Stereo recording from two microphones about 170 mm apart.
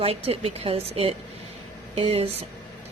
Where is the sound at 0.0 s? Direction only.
35° right (ahead or behind).